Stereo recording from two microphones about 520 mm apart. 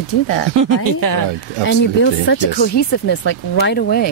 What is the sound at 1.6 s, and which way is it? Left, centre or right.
Speech, left.